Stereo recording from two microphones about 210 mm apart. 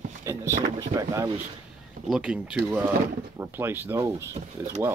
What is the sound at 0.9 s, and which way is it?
Speech, 15° right (ahead or behind).